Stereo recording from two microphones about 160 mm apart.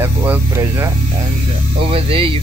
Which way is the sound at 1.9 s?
35° right (ahead or behind).